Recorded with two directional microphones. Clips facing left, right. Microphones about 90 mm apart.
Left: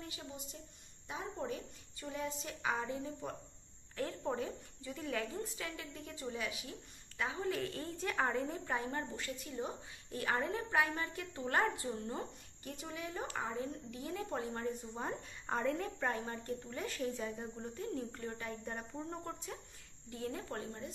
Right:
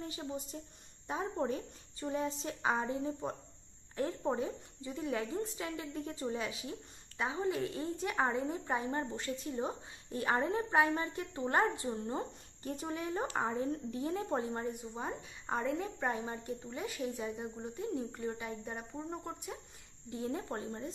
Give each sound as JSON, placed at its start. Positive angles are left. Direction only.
{"t": 0.0, "sound": "a woman's voice", "side_deg": -30}
{"t": 12.7, "sound": "a woman's voice", "side_deg": -35}
{"t": 14.5, "sound": "a woman's voice", "side_deg": -15}